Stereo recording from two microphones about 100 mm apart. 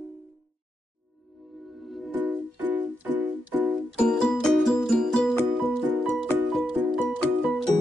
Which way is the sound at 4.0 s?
5° left (ahead or behind).